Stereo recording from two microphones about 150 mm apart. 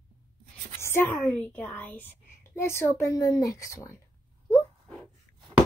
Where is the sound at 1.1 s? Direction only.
5° left (ahead or behind).